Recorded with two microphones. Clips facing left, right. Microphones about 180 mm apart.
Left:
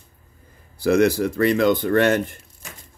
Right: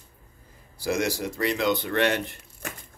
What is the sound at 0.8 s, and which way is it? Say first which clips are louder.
Speech: left 9 dB; 60° left (ahead or behind).